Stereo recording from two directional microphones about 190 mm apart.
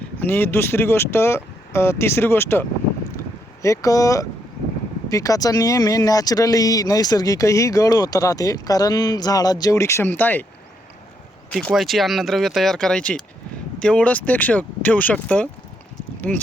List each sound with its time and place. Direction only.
0.2 s speech: 10° left (ahead or behind)
11.5 s speech: centre (ahead or behind)